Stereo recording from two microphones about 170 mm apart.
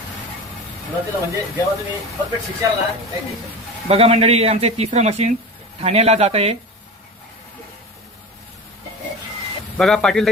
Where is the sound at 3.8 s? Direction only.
35° right (ahead or behind).